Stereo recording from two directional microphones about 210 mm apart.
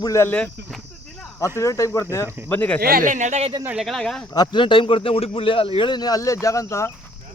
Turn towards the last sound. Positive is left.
turn(degrees=15)  # may be behind; listen again after turning